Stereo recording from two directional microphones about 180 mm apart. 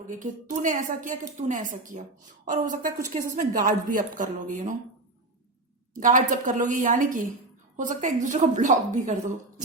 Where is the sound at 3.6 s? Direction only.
50° right (ahead or behind).